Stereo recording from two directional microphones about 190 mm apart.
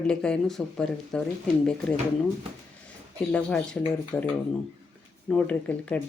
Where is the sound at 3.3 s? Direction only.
5° left (ahead or behind).